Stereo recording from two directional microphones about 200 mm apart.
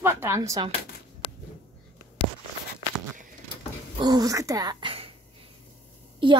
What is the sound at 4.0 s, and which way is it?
Speech, 20° right (ahead or behind).